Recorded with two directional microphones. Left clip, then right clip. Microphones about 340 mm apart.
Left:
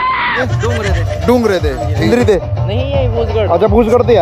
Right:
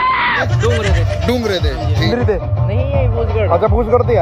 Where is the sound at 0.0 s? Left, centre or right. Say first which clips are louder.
Even; centre.